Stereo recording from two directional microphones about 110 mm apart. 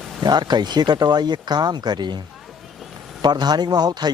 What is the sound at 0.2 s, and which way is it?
A man's voice, 40° right (ahead or behind).